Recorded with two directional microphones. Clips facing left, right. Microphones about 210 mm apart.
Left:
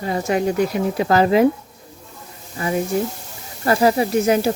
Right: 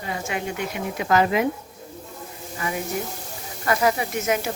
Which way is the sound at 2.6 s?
30° left (ahead or behind).